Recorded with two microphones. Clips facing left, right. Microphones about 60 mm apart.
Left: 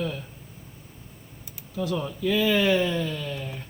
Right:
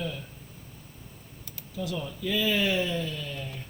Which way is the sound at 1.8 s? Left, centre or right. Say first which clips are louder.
Left 5 dB; left.